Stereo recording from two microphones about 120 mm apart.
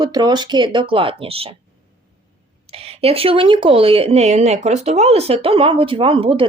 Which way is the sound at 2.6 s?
55° right (ahead or behind).